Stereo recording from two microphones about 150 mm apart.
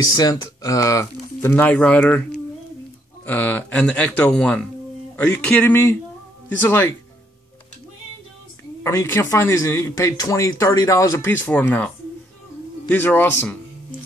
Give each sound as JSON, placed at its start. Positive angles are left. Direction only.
{"t": 0.2, "sound": "speech", "side_deg": 25}
{"t": 3.3, "sound": "speech", "side_deg": 10}
{"t": 8.8, "sound": "speech", "side_deg": 20}
{"t": 12.9, "sound": "speech", "side_deg": 15}